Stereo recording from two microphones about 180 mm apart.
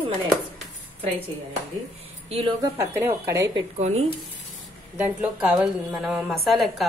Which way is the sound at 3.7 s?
35° right (ahead or behind).